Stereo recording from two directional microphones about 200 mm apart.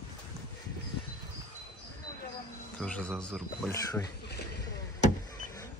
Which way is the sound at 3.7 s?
15° left (ahead or behind).